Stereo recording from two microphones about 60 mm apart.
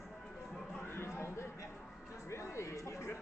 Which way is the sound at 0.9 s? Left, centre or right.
Left.